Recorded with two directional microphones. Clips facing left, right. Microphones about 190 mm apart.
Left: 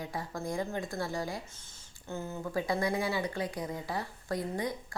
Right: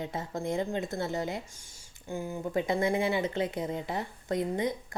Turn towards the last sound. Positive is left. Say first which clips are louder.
# right 4 dB
turn(degrees=-20)  # may be behind; listen again after turning